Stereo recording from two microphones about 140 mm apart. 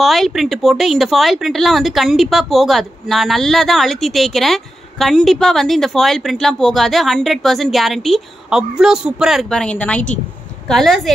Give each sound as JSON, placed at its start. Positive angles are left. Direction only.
{"t": 0.0, "sound": "speech", "side_deg": 0}